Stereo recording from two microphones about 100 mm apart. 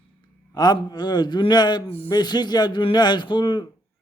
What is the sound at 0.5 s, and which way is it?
Speech, 45° left (ahead or behind).